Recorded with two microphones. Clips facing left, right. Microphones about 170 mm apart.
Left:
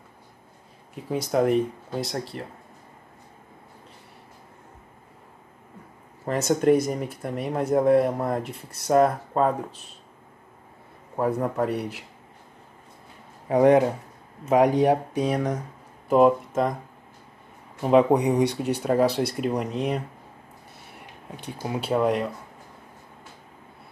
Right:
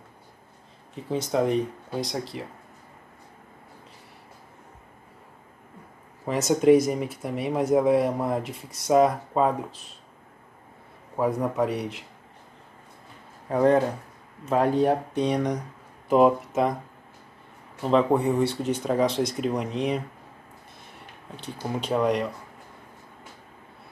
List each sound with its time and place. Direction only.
0.9 s speech: 10° left (ahead or behind)
6.2 s speech: centre (ahead or behind)
11.1 s speech: centre (ahead or behind)
13.5 s speech: 15° left (ahead or behind); by 16.7 s centre (ahead or behind)
17.8 s speech: 15° left (ahead or behind)
20.9 s speech: 10° left (ahead or behind)